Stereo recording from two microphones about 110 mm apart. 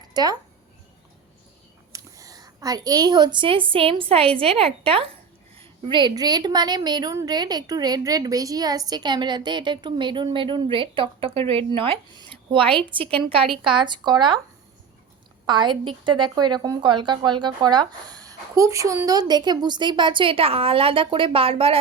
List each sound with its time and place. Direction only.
0.1 s speech: 40° right (ahead or behind)
1.9 s a woman's voice: 30° right (ahead or behind); by 5.0 s 60° right (ahead or behind)
5.5 s a woman's voice: 45° right (ahead or behind)
13.5 s a woman's voice: 5° right (ahead or behind)
13.8 s a woman's voice: 45° right (ahead or behind)
15.4 s a woman's voice: 45° right (ahead or behind)